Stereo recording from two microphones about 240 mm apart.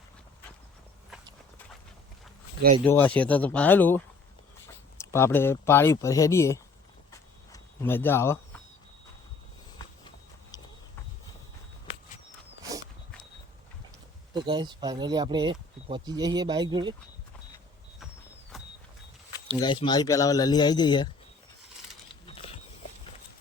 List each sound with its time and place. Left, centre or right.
2.8 s speech: centre
7.5 s a sound: centre
14.3 s speech: centre
18.5 s vehicle: centre
19.5 s speech: centre
22.3 s a sound: left